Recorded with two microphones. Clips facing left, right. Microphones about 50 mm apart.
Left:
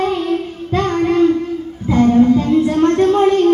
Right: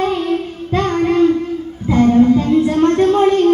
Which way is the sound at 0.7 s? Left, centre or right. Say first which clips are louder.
Even; right.